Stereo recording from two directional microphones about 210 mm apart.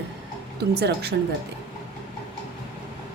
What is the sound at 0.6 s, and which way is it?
Speech, 50° right (ahead or behind).